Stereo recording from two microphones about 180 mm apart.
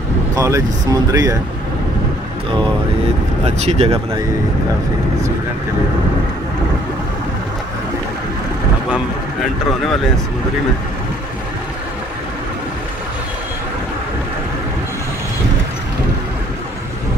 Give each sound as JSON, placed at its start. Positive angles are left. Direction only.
{"t": 0.4, "sound": "speech", "side_deg": -15}
{"t": 3.4, "sound": "speech", "side_deg": -35}